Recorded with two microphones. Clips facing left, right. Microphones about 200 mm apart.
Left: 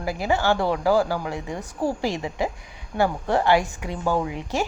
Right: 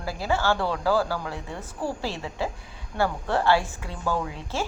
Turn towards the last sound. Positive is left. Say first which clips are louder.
# left 4 dB
turn(degrees=15)  # may be behind; listen again after turning